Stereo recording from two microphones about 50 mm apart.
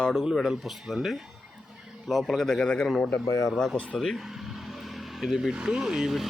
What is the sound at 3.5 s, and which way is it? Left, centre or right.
Speech, centre.